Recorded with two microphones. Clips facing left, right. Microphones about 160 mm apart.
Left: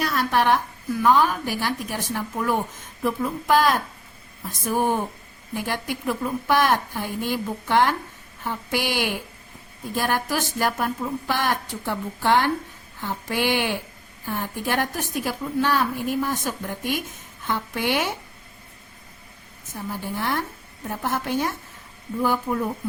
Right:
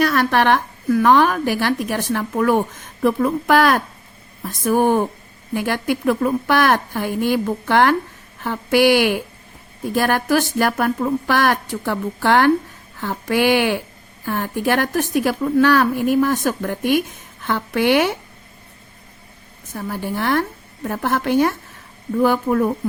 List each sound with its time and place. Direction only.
0.0 s a woman's voice: 75° right (ahead or behind)
5.5 s speech: 90° right
9.9 s a woman's voice: 80° right
19.7 s a woman's voice: 75° right (ahead or behind)